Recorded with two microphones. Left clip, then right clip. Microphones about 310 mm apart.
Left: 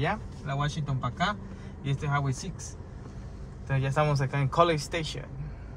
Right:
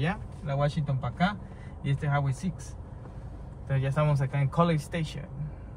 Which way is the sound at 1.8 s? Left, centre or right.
Centre.